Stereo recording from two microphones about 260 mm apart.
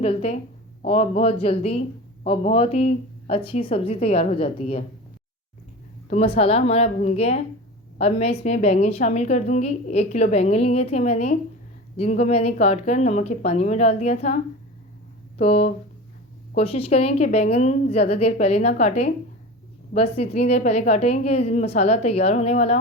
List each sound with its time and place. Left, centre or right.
0.0 s a woman's voice: left
6.1 s a woman's voice: left
15.4 s a woman's voice: left